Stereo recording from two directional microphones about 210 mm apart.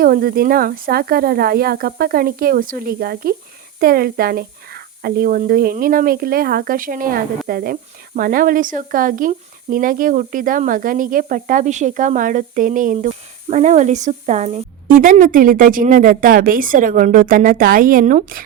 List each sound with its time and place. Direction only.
0.0 s speech: 45° right (ahead or behind)